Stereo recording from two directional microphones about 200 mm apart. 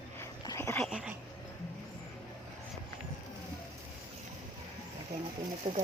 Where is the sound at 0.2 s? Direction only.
15° left (ahead or behind).